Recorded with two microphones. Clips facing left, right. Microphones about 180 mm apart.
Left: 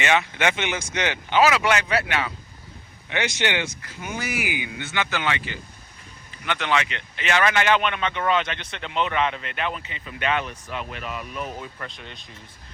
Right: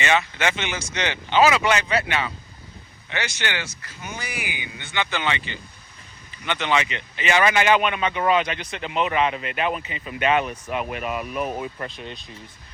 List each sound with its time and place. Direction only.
0.0 s speech: 10° left (ahead or behind)
3.1 s speech: 20° left (ahead or behind)
4.0 s speech: 10° left (ahead or behind)
6.4 s speech: centre (ahead or behind)
11.2 s speech: 60° right (ahead or behind)